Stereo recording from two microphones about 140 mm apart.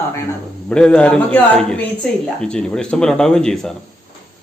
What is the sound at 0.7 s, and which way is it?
Speech, 5° left (ahead or behind).